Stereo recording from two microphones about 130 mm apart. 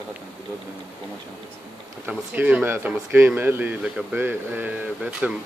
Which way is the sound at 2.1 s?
15° right (ahead or behind).